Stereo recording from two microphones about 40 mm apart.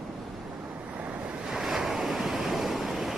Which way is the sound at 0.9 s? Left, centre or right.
Right.